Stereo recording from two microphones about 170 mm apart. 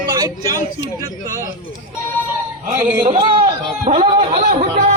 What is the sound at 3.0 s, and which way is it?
Speech, 30° right (ahead or behind).